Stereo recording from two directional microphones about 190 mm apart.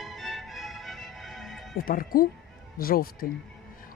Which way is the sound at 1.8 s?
50° left (ahead or behind).